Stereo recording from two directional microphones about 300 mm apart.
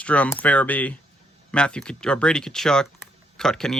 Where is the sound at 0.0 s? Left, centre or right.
Centre.